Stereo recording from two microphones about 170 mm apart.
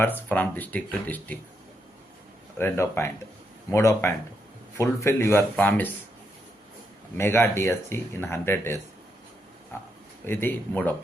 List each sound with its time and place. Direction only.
0.0 s speech: 10° left (ahead or behind)
2.6 s speech: 15° left (ahead or behind)
7.2 s speech: 15° left (ahead or behind)